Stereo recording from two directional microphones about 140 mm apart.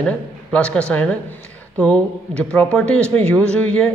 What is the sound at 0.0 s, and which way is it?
Speech, 5° left (ahead or behind).